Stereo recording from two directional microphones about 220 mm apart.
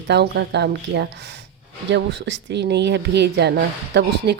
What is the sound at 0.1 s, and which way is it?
Speech, 50° right (ahead or behind).